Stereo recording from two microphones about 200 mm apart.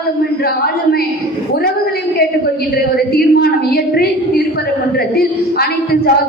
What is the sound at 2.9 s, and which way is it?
A woman's voice, 50° left (ahead or behind).